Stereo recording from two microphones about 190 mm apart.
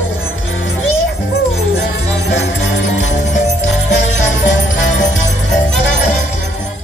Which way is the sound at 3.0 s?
40° left (ahead or behind).